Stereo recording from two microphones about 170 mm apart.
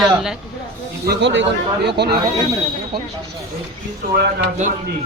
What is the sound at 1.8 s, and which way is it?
Speech, 75° right (ahead or behind).